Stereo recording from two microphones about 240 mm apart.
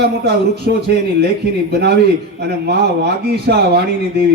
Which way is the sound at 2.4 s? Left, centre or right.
Right.